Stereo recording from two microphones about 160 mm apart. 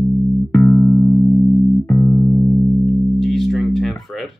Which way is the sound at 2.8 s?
Centre (ahead or behind).